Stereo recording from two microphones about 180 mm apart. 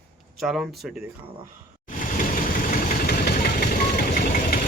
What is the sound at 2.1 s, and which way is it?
Vehicle, 50° left (ahead or behind).